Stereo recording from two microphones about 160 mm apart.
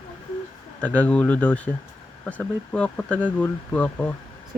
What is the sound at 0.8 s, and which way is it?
Speech, 10° left (ahead or behind).